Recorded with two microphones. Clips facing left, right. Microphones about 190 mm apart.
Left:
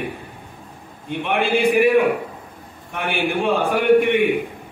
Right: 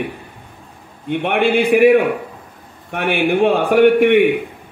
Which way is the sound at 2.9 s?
60° right (ahead or behind).